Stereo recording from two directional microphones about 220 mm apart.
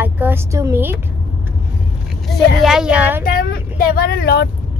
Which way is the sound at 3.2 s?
40° left (ahead or behind).